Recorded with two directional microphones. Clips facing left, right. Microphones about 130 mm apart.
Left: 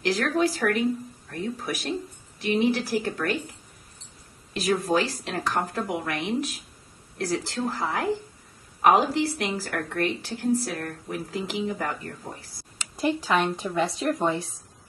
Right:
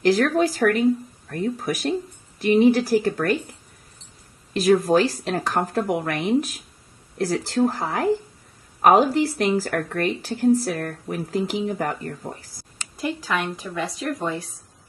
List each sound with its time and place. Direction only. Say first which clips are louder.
0.0 s a woman's voice: right 5 dB; 40° right (ahead or behind)
4.8 s a woman's voice: right 6 dB; 40° right (ahead or behind)
12.9 s speech: left 2 dB; 25° left (ahead or behind)